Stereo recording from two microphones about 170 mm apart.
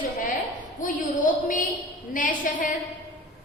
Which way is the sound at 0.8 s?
50° left (ahead or behind).